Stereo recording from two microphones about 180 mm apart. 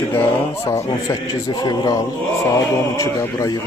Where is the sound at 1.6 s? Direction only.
25° left (ahead or behind).